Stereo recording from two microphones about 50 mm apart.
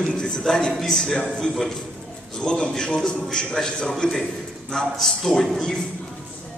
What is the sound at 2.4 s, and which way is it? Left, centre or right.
A man's voice, centre.